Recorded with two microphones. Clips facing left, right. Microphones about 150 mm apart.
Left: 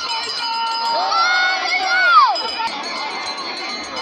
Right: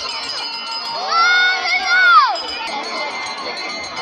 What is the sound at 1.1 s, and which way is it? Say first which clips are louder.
Crowd: even; 20° left (ahead or behind).